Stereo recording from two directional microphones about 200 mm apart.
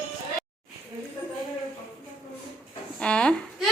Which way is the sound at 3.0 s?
5° left (ahead or behind).